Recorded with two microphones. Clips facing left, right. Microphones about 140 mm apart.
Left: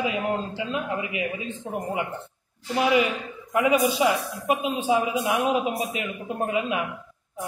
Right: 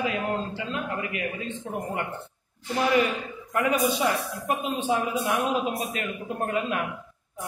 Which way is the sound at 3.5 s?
10° left (ahead or behind).